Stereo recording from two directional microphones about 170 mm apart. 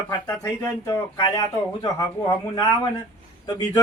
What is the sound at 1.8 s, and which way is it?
Speech, 20° left (ahead or behind).